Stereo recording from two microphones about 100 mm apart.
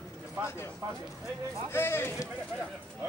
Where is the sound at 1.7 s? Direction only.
25° left (ahead or behind).